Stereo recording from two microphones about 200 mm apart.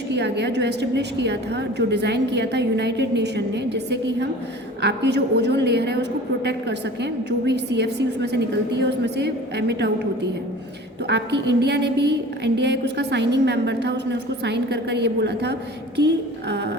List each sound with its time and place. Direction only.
0.1 s a woman's voice: 60° right (ahead or behind)